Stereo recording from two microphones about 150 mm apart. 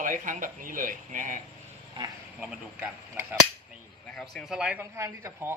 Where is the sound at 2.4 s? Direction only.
10° right (ahead or behind).